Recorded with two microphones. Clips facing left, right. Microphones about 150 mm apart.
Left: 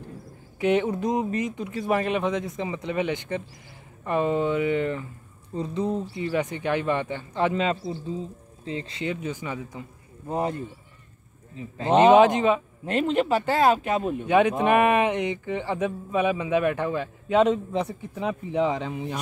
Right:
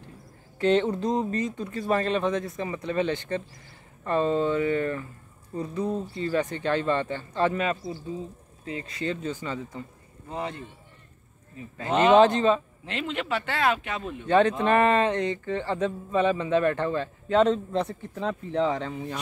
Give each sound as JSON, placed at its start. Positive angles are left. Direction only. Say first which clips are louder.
{"t": 0.6, "sound": "speech", "louder": "even", "side_deg": 10}
{"t": 9.0, "sound": "speech", "louder": "right 1 dB", "side_deg": 15}
{"t": 10.2, "sound": "speech", "louder": "left 6 dB", "side_deg": 45}
{"t": 11.5, "sound": "speech", "louder": "left 5 dB", "side_deg": 25}
{"t": 12.1, "sound": "speech", "louder": "right 2 dB", "side_deg": 15}
{"t": 12.8, "sound": "speech", "louder": "left 8 dB", "side_deg": 45}
{"t": 14.2, "sound": "speech", "louder": "even", "side_deg": 10}